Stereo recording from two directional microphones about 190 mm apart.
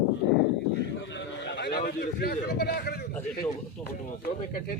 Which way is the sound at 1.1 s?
65° left (ahead or behind).